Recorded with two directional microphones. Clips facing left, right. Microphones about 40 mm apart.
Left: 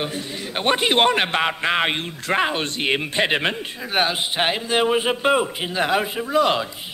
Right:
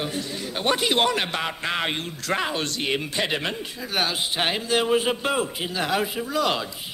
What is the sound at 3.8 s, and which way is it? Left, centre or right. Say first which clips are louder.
A man's voice: left 4 dB; left.